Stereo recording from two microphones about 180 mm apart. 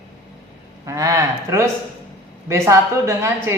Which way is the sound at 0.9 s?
15° right (ahead or behind).